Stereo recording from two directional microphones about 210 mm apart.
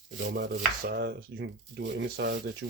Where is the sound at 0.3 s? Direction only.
45° right (ahead or behind).